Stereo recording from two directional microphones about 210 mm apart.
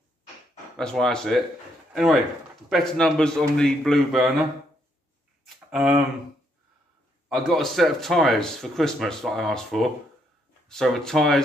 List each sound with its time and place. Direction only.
0.7 s speech: centre (ahead or behind)
5.5 s a sound: centre (ahead or behind)
7.2 s speech: centre (ahead or behind)